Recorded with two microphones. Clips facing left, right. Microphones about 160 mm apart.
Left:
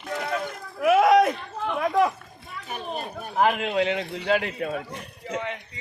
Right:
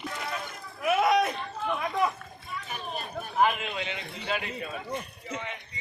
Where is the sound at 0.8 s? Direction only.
90° left.